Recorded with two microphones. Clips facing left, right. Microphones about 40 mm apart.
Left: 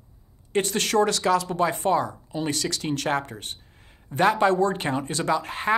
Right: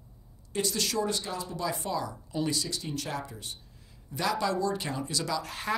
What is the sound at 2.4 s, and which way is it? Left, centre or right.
Speech, left.